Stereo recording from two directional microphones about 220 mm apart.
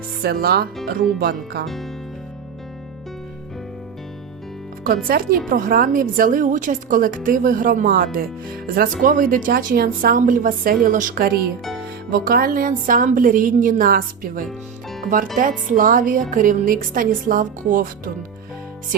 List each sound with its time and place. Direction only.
0.2 s speech: 45° right (ahead or behind)
1.6 s speech: centre (ahead or behind)
4.8 s a woman's voice: 40° right (ahead or behind)